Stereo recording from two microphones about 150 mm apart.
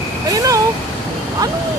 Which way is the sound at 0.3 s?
25° right (ahead or behind).